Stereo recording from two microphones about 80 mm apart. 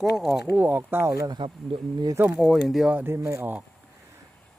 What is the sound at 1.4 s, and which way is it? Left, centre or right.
Speech, right.